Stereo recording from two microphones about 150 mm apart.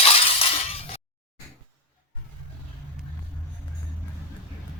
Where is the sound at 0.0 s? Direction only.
40° left (ahead or behind).